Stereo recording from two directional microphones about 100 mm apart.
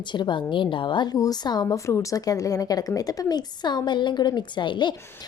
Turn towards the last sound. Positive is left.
turn(degrees=50)  # may be behind; listen again after turning